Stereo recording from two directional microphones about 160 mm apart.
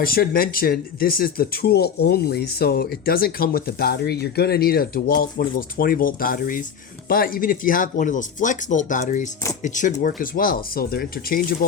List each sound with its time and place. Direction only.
0.0 s speech: 65° left (ahead or behind)